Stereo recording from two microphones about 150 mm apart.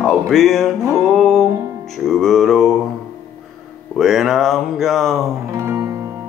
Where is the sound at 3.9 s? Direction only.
Centre (ahead or behind).